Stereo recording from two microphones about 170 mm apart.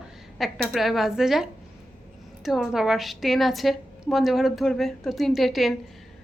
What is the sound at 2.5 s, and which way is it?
A woman's voice, centre (ahead or behind).